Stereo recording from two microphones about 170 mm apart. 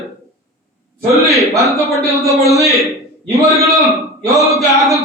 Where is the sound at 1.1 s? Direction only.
20° right (ahead or behind).